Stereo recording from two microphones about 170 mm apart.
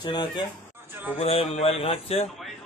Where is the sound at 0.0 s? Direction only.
30° left (ahead or behind).